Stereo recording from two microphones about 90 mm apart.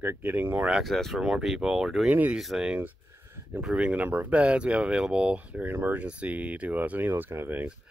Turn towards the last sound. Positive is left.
turn(degrees=-20)  # may be behind; listen again after turning